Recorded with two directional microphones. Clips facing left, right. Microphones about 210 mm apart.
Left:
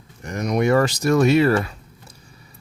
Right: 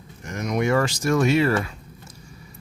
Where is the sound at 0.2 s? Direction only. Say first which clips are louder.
Left 3 dB; 35° left (ahead or behind).